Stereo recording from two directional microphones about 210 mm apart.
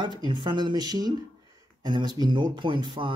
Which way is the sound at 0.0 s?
20° right (ahead or behind).